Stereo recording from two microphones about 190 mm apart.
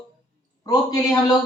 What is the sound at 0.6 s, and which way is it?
Speech, 20° left (ahead or behind).